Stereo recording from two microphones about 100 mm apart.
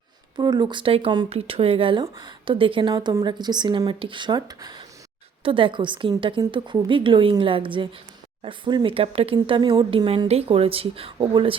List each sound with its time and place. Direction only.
0.3 s speech: 45° right (ahead or behind)
1.3 s speech: 80° right; by 2.9 s 60° right (ahead or behind)
2.9 s speech: 40° right (ahead or behind)
3.8 s speech: 60° right (ahead or behind); by 4.8 s 45° right (ahead or behind)
5.4 s speech: 60° right (ahead or behind)
10.2 s speech: 85° right
11.2 s speech: 55° right (ahead or behind)